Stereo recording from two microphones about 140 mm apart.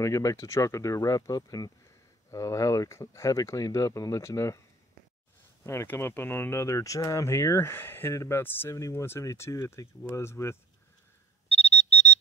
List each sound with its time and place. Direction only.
0.0 s speech: 25° left (ahead or behind)
5.6 s speech: 20° left (ahead or behind)
11.4 s alarm clock: 45° left (ahead or behind)